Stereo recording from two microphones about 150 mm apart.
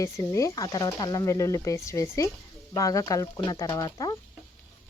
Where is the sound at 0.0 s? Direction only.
20° left (ahead or behind).